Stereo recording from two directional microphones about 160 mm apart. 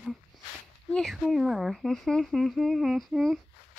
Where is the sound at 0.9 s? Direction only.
Centre (ahead or behind).